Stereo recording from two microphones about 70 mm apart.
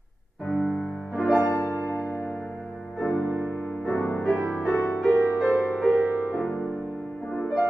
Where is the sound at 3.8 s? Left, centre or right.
Left.